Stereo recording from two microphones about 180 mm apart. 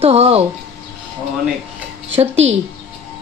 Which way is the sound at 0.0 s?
35° right (ahead or behind).